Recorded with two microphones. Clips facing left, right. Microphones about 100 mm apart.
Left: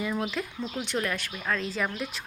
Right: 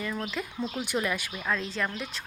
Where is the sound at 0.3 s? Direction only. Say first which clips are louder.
Even; centre (ahead or behind).